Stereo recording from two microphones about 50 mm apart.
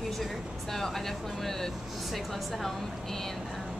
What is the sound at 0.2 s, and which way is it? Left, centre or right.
Speech, centre.